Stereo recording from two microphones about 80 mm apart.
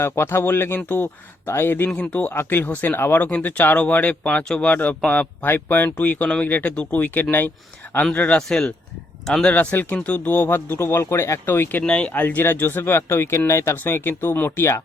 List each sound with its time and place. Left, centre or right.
0.0 s speech: left; by 4.7 s centre
4.7 s speech: left
8.4 s speech: centre; by 11.8 s left
11.8 s speech: centre; by 14.8 s left